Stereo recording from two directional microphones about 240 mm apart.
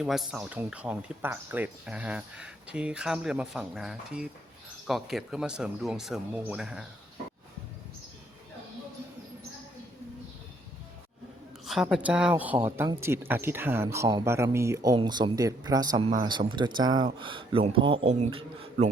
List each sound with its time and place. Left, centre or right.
0.0 s speech: centre
11.6 s speech: centre; by 18.9 s right